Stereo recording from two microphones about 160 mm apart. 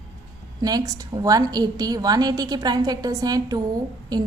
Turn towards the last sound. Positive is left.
turn(degrees=-25)  # may be behind; listen again after turning